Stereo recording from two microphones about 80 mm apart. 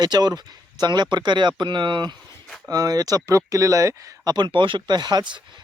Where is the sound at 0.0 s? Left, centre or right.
Right.